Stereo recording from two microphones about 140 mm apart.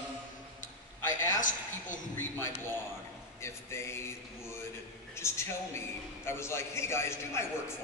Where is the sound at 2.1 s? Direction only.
20° left (ahead or behind).